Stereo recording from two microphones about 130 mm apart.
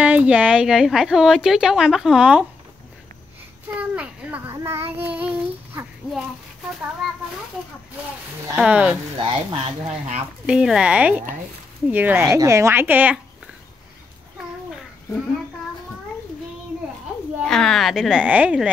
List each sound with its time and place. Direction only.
0.0 s a woman's voice: 10° right (ahead or behind)
3.7 s a child's voice: 10° right (ahead or behind)
8.5 s speech: 5° right (ahead or behind)
9.2 s speech: 45° right (ahead or behind)
10.4 s speech: 5° right (ahead or behind)
12.3 s a woman's voice: 25° right (ahead or behind)
17.4 s a woman's voice: 5° left (ahead or behind)